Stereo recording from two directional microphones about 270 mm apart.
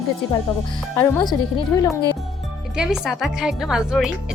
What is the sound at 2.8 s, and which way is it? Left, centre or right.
A woman's voice, centre.